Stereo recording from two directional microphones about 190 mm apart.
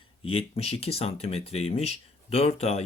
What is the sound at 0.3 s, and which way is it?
Speech, 30° left (ahead or behind).